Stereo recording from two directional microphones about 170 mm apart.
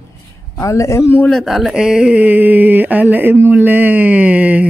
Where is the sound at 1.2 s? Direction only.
Centre (ahead or behind).